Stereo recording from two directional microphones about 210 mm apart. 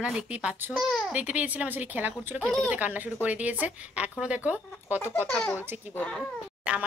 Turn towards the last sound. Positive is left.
turn(degrees=-5)  # may be behind; listen again after turning